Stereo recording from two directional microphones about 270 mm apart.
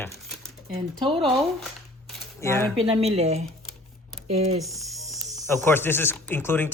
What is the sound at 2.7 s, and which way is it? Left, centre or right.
Speech, right.